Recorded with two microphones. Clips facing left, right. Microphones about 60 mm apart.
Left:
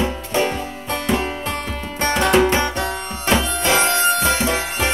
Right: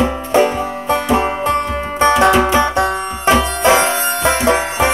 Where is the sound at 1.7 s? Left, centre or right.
Right.